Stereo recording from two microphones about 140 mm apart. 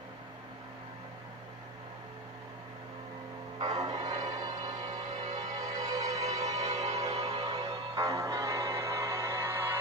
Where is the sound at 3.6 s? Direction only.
25° right (ahead or behind).